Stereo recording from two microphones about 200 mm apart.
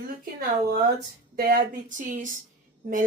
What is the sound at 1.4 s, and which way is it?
Speech, 50° right (ahead or behind).